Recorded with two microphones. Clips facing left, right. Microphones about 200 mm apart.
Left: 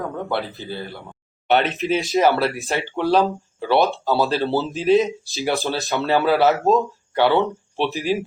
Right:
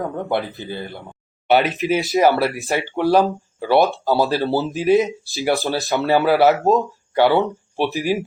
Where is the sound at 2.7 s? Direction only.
10° right (ahead or behind).